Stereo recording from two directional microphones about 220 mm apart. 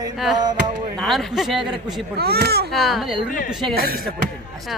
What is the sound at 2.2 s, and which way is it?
Speech, 45° right (ahead or behind).